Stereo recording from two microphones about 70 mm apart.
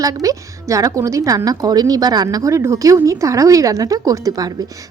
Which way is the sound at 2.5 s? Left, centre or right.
Right.